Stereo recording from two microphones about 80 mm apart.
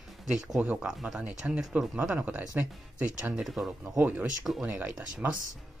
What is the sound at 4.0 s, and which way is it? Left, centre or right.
Speech, right.